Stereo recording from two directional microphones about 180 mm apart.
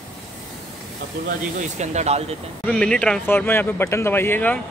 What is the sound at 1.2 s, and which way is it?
Speech, 40° right (ahead or behind).